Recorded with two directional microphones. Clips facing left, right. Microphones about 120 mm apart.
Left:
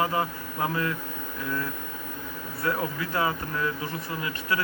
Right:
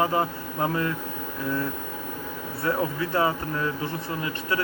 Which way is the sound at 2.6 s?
30° right (ahead or behind).